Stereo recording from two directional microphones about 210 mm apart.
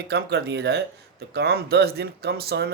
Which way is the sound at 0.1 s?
50° right (ahead or behind).